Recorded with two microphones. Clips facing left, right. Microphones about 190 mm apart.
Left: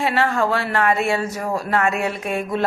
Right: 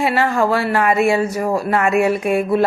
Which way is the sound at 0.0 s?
10° right (ahead or behind).